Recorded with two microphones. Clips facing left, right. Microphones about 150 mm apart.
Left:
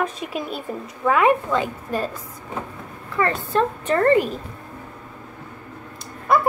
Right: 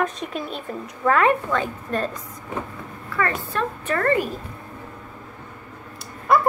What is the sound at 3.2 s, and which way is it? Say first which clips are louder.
A woman's voice: left 4 dB; 25° left (ahead or behind).